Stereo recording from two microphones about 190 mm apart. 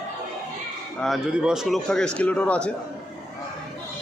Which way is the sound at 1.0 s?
Centre (ahead or behind).